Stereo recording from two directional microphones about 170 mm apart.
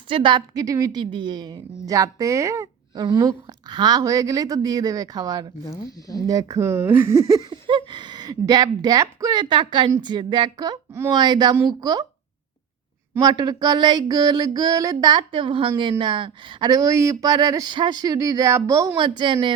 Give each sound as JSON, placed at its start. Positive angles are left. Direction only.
{"t": 0.1, "sound": "speech", "side_deg": -25}
{"t": 5.7, "sound": "speech", "side_deg": 20}
{"t": 6.2, "sound": "speech", "side_deg": -20}
{"t": 13.1, "sound": "speech", "side_deg": -25}